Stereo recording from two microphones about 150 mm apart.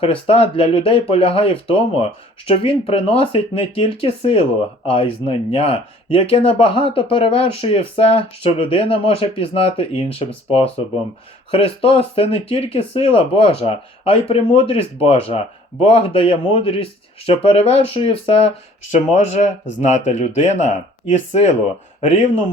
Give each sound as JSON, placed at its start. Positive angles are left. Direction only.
{"t": 0.0, "sound": "speech", "side_deg": 40}